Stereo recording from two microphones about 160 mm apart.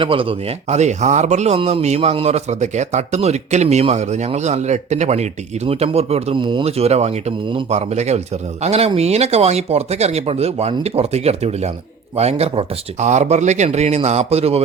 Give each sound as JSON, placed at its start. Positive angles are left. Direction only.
{"t": 0.0, "sound": "speech", "side_deg": -35}